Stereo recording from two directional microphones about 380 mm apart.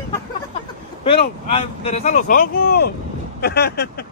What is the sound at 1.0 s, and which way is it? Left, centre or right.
Speech, centre.